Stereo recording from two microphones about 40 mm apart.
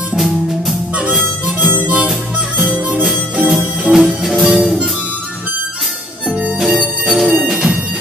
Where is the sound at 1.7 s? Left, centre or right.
Right.